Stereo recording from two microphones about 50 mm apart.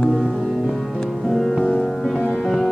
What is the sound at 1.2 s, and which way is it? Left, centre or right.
Music, centre.